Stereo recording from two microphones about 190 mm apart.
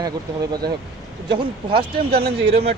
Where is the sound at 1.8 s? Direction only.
55° right (ahead or behind).